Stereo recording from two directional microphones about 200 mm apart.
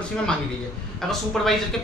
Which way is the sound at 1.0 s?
Centre (ahead or behind).